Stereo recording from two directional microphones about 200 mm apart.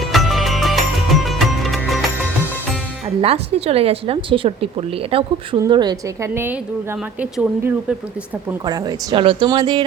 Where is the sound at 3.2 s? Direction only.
30° right (ahead or behind); by 8.0 s 5° right (ahead or behind).